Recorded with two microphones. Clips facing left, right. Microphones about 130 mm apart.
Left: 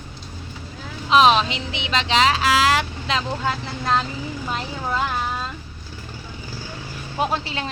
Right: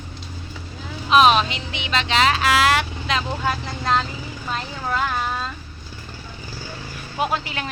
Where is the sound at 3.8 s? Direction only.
15° left (ahead or behind).